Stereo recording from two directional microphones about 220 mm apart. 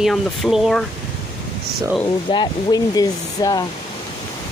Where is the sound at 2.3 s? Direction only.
20° left (ahead or behind).